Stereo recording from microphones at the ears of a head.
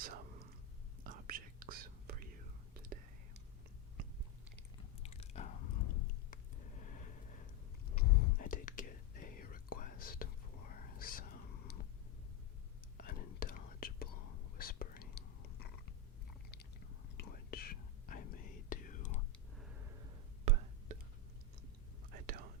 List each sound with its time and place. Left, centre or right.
0.0 s whispering: right
4.8 s chewing: left
7.9 s whispering: left
13.1 s whispering: left
17.2 s whispering: left
19.8 s whispering: right
22.1 s whispering: right